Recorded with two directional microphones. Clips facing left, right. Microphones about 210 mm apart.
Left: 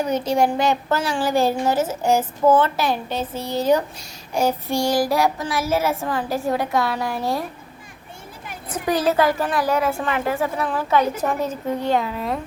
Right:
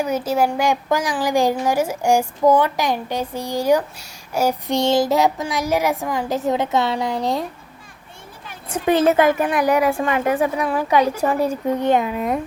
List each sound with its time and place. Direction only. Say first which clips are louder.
0.0 s a woman's voice: even; 5° right (ahead or behind)
4.7 s a child's voice: right 5 dB; 20° right (ahead or behind)
8.7 s a woman's voice: right 4 dB; 25° right (ahead or behind)